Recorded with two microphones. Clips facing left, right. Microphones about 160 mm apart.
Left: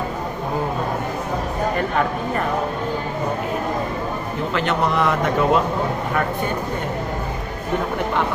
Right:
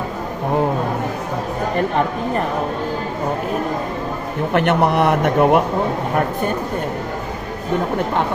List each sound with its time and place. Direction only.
4.5 s speech: 60° right (ahead or behind)